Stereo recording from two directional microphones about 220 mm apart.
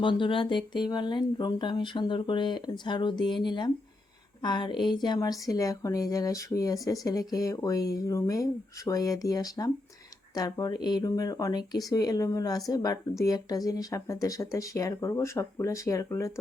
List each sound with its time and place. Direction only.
0.0 s speech: 20° left (ahead or behind)